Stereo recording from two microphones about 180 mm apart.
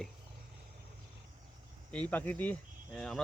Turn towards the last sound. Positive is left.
turn(degrees=0)  # may be behind; listen again after turning